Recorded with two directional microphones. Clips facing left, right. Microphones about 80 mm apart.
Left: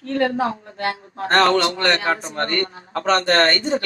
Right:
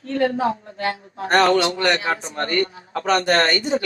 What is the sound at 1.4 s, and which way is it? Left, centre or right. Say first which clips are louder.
A man's voice: even; centre.